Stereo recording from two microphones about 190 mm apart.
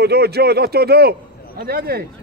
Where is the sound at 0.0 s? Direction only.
60° right (ahead or behind).